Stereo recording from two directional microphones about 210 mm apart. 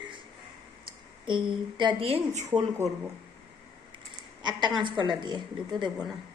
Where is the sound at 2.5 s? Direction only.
15° right (ahead or behind).